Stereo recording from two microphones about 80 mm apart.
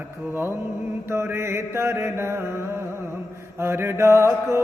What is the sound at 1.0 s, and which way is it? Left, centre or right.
Music, right.